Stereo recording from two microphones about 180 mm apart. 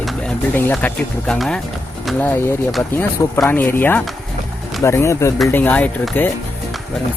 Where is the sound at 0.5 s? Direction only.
10° left (ahead or behind).